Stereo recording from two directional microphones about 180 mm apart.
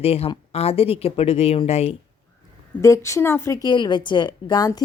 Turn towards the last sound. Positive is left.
turn(degrees=20)  # may be behind; listen again after turning